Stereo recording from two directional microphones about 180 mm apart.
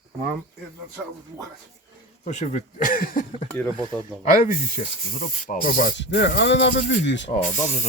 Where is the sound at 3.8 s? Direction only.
20° right (ahead or behind).